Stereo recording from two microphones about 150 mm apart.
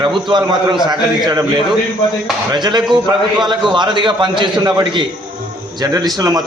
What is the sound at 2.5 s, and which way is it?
A man's voice, 30° right (ahead or behind).